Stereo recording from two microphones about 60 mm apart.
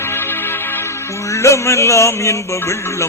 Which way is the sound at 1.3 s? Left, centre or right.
Left.